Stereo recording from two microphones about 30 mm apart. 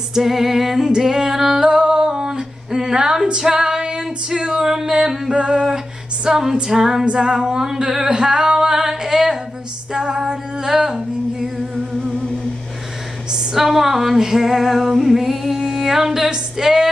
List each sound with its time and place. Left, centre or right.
0.1 s music: centre
0.8 s singing: centre
3.3 s female singing: right
4.6 s music: centre
5.3 s female singing: right
7.2 s music: centre
8.1 s female singing: right
11.4 s humming: centre
13.3 s a sound: centre
13.7 s music: centre